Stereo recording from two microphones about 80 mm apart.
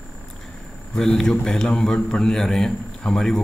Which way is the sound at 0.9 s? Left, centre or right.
Centre.